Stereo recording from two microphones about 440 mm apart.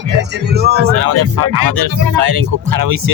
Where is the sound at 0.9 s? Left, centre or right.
Right.